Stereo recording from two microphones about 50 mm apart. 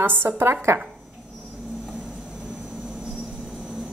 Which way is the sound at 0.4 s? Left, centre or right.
Right.